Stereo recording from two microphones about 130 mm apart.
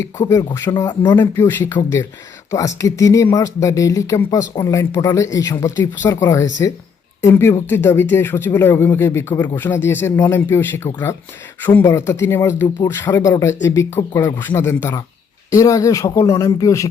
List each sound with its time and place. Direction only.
0.3 s speech: 25° left (ahead or behind)
13.1 s speech: 30° left (ahead or behind)